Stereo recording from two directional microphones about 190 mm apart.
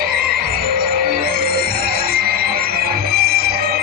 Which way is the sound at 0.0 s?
50° right (ahead or behind).